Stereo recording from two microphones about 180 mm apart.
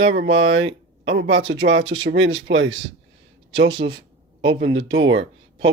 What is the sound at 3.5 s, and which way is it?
Speech, 70° right (ahead or behind).